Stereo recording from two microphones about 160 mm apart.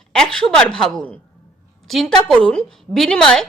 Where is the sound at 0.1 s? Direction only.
5° left (ahead or behind).